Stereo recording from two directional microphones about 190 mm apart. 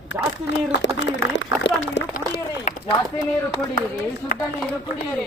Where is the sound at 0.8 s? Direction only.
70° left (ahead or behind).